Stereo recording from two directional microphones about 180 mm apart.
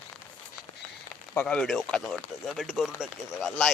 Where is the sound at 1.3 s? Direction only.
5° left (ahead or behind).